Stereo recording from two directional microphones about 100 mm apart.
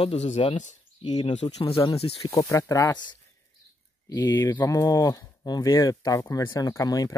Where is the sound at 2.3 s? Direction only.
30° left (ahead or behind).